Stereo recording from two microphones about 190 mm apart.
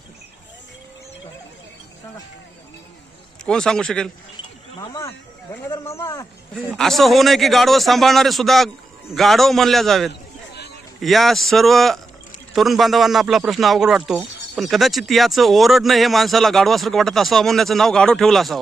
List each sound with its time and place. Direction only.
3.4 s speech: 5° left (ahead or behind)
4.8 s speech: 15° left (ahead or behind)
6.5 s speech: centre (ahead or behind)
10.1 s a sound: 60° left (ahead or behind)
11.0 s speech: centre (ahead or behind)